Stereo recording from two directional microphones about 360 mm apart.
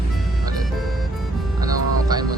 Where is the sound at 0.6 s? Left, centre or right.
Centre.